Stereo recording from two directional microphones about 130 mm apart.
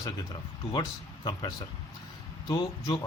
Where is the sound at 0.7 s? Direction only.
35° left (ahead or behind).